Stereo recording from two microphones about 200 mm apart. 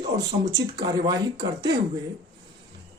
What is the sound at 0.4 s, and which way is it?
Speech, 20° right (ahead or behind).